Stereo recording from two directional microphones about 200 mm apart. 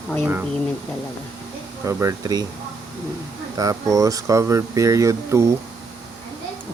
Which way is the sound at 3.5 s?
15° right (ahead or behind).